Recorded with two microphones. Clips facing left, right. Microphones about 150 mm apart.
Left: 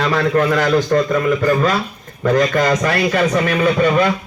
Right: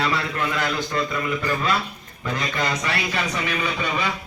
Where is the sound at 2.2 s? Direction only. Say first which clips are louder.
Left 11 dB; 45° left (ahead or behind).